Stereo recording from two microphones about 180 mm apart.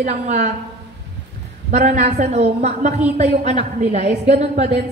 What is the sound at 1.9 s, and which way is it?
A woman's voice, 40° right (ahead or behind).